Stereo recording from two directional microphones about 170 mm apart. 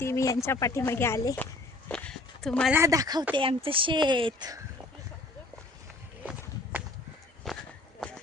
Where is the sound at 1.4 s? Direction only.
10° left (ahead or behind).